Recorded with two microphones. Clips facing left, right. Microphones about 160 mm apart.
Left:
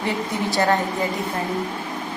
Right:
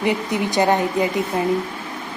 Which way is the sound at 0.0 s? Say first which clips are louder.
Right 3 dB; 20° right (ahead or behind).